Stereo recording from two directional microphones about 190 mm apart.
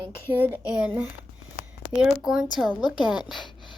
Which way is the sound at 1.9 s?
5° right (ahead or behind).